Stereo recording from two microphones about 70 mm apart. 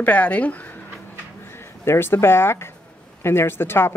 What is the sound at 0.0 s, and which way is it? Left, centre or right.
Speech, centre.